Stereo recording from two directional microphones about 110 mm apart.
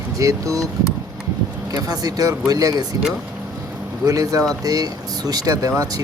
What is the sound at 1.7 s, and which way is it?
Speech, 35° right (ahead or behind).